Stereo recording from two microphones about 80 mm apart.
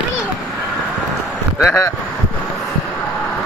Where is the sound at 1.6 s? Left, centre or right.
Left.